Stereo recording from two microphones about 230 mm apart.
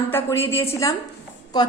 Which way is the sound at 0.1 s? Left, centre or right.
Centre.